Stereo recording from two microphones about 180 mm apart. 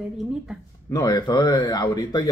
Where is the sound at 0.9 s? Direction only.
20° left (ahead or behind).